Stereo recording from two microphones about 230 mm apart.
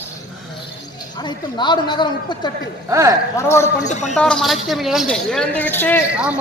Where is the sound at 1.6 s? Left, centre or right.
Centre.